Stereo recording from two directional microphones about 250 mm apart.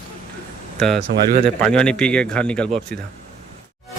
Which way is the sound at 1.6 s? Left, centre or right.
Centre.